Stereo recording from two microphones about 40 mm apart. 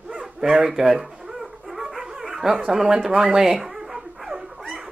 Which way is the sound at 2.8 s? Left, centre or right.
Centre.